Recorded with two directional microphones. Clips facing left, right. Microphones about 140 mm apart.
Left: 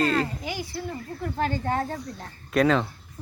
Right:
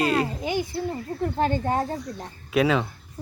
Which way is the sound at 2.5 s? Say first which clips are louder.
Even; 5° right (ahead or behind).